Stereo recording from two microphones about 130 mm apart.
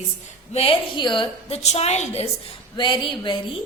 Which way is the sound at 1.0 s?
40° left (ahead or behind).